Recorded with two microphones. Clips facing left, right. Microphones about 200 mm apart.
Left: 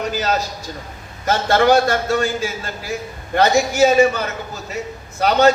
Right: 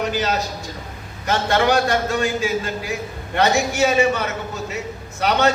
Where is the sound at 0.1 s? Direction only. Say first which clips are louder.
Left 1 dB; 40° left (ahead or behind).